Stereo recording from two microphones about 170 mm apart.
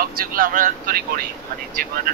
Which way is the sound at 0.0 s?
55° right (ahead or behind).